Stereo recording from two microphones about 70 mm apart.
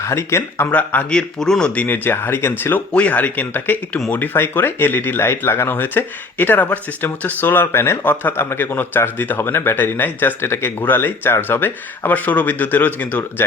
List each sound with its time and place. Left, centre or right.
0.0 s speech: left
0.7 s speech: left
1.1 s speech: centre
2.0 s speech: left
2.9 s speech: left